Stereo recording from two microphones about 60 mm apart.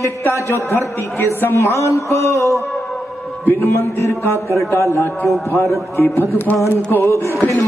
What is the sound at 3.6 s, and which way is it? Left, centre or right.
Speech, left.